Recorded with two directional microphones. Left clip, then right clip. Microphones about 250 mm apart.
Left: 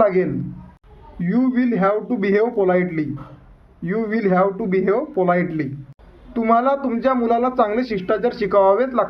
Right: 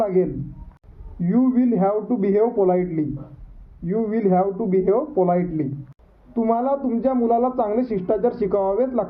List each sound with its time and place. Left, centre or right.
0.0 s speech: centre